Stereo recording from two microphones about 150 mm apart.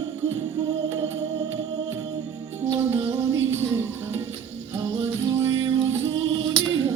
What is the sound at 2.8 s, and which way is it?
Music, 20° right (ahead or behind).